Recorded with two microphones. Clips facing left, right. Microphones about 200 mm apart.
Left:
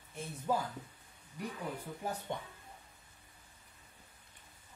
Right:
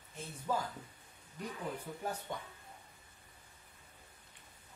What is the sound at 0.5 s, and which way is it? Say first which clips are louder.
Speech: left 2 dB; 15° left (ahead or behind).